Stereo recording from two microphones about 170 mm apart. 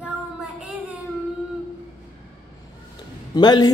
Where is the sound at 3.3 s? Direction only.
25° left (ahead or behind).